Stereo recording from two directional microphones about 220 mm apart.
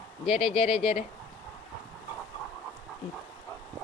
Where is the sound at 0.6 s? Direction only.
25° left (ahead or behind).